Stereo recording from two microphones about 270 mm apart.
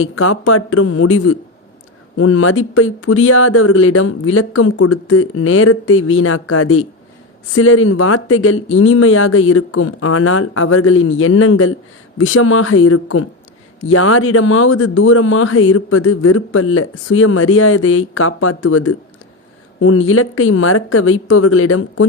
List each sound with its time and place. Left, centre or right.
0.0 s speech: left